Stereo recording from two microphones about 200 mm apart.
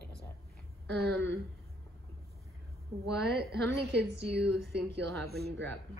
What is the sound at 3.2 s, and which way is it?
A woman's voice, 55° right (ahead or behind).